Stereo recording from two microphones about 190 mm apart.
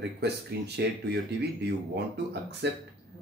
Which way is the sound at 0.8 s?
60° right (ahead or behind).